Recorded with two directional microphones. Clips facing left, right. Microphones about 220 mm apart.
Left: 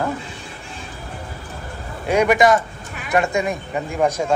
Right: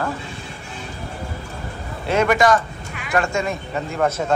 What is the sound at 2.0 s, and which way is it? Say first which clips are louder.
A man's voice: left 2 dB; 10° left (ahead or behind).